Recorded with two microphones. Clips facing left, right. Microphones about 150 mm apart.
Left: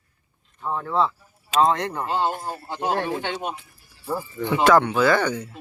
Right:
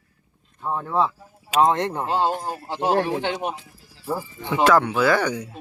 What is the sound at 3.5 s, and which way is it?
Music, 90° right.